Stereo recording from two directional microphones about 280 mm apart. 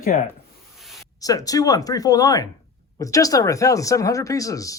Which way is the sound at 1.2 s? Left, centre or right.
Centre.